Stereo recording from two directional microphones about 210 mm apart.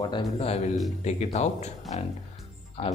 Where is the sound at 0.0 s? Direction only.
20° left (ahead or behind).